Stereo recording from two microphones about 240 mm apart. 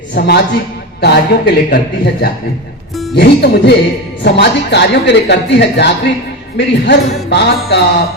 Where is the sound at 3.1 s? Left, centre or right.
Left.